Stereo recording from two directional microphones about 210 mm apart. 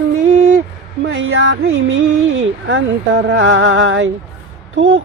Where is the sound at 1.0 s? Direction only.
65° right (ahead or behind).